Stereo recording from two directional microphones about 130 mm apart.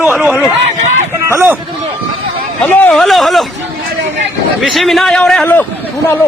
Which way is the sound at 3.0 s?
Centre (ahead or behind).